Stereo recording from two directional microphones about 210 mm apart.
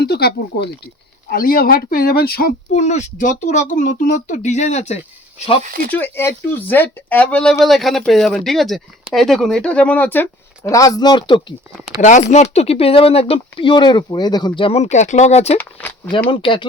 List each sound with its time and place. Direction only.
0.0 s speech: 50° left (ahead or behind)
2.7 s speech: 35° left (ahead or behind)
5.9 s speech: 10° left (ahead or behind); by 15.5 s 30° left (ahead or behind)
15.5 s speech: 10° left (ahead or behind)
16.3 s speech: 25° left (ahead or behind)